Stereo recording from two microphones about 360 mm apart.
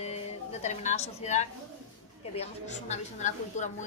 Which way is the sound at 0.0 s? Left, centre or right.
Centre.